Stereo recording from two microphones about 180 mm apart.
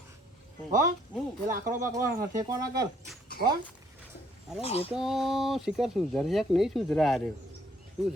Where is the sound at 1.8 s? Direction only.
15° right (ahead or behind).